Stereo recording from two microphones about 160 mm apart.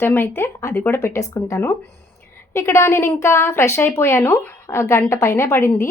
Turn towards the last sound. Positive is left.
turn(degrees=15)  # may be behind; listen again after turning